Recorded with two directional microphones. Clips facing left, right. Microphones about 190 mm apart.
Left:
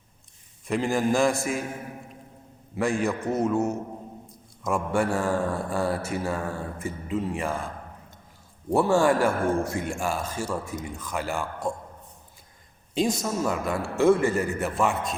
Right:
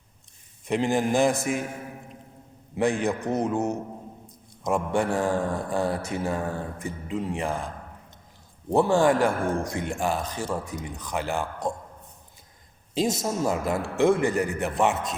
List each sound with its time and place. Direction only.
0.7 s a man's voice: 20° right (ahead or behind)
2.7 s a man's voice: 20° right (ahead or behind)
8.7 s a man's voice: 20° right (ahead or behind)
12.9 s a man's voice: 25° right (ahead or behind)